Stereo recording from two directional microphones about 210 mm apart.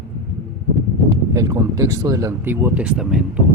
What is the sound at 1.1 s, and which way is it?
Speech, 15° right (ahead or behind).